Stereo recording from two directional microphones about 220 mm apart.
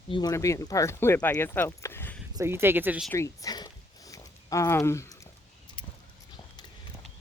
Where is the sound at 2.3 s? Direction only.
10° right (ahead or behind).